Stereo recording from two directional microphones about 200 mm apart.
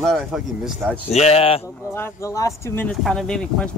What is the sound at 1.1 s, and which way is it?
Speech, 30° left (ahead or behind).